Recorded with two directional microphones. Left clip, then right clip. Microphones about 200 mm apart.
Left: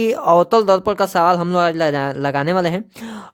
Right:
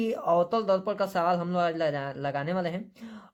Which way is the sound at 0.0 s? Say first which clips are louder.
Left 11 dB; 60° left (ahead or behind).